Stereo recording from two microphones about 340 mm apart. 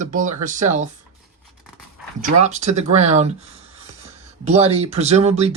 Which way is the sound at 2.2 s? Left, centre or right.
Right.